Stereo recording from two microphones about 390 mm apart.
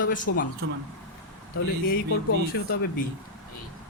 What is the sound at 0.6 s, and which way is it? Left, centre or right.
Speech, right.